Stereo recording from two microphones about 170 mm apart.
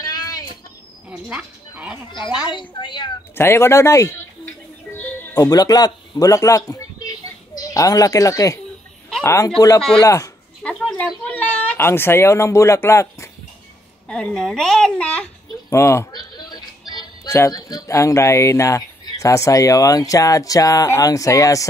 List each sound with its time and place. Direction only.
0.0 s bird: 20° left (ahead or behind)
1.1 s a sound: 5° right (ahead or behind)
2.0 s a woman's voice: 25° left (ahead or behind)
3.3 s a man's voice: 15° left (ahead or behind)
5.0 s music: 10° left (ahead or behind)
5.4 s a man's voice: 20° left (ahead or behind)
9.8 s a child's voice: 5° left (ahead or behind)
10.0 s a woman's voice: 20° left (ahead or behind)
10.6 s a sound: 5° left (ahead or behind)
14.0 s a child's voice: 5° left (ahead or behind)